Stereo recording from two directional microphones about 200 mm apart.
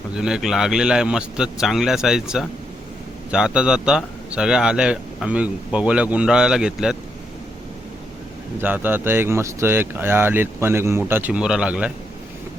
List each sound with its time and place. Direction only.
0.1 s a man's voice: 5° right (ahead or behind)
8.6 s speech: 10° right (ahead or behind)